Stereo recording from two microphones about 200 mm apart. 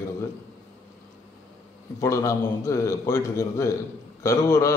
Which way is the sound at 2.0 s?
15° left (ahead or behind).